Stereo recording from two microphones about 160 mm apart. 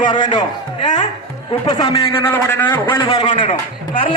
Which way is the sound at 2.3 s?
15° left (ahead or behind).